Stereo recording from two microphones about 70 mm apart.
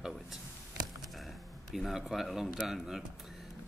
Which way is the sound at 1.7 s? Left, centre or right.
Centre.